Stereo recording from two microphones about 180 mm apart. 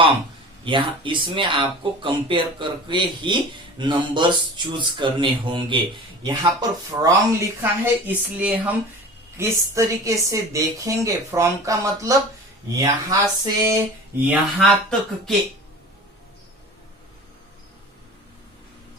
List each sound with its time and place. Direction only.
0.6 s a woman's voice: 25° right (ahead or behind)
14.6 s speech: 5° left (ahead or behind)